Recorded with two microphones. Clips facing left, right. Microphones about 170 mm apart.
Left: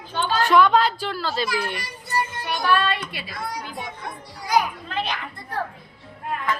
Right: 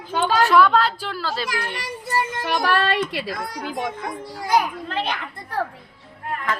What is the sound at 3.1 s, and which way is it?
A woman's voice, 85° right.